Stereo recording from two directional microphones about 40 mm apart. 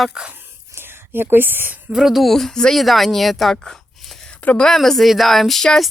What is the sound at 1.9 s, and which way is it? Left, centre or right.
Speech, centre.